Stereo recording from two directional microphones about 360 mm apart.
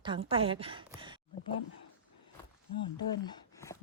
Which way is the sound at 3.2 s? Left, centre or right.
Centre.